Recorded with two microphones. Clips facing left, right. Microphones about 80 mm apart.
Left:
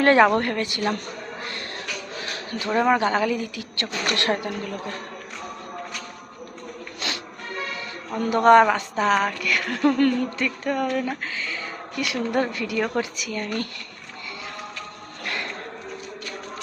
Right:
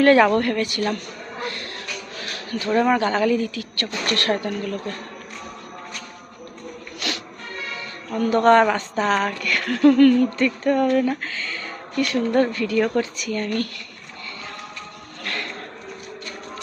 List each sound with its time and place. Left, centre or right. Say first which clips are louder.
0.0 s a woman's voice: right 2 dB; left
2.2 s a sound: right 3 dB; left
2.7 s a woman's voice: right 1 dB; centre
7.0 s music: right 2 dB; left
8.1 s a woman's voice: even; centre
15.2 s a sound: right 1 dB; centre